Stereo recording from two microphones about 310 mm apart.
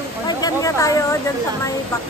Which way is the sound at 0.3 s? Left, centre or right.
Centre.